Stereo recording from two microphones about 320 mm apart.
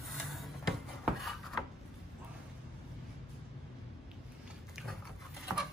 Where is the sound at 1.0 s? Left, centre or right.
Centre.